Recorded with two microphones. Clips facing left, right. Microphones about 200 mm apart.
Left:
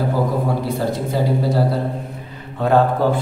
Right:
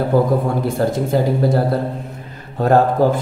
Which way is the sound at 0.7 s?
50° right (ahead or behind).